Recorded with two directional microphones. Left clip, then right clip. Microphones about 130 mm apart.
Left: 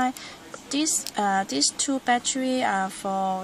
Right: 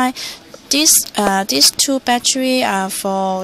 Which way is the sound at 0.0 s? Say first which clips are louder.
Right 8 dB; 40° right (ahead or behind).